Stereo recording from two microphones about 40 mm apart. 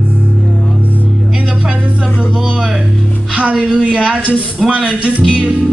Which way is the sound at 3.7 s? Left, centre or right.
Right.